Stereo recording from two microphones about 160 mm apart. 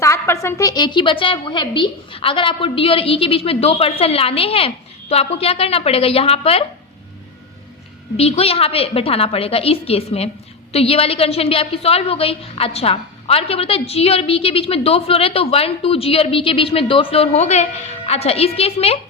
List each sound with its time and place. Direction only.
0.0 s a woman's voice: 15° left (ahead or behind); by 6.7 s 40° left (ahead or behind)
8.1 s a woman's voice: 40° left (ahead or behind)